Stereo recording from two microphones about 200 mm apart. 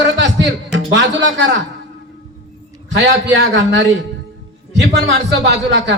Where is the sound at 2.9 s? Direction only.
65° right (ahead or behind).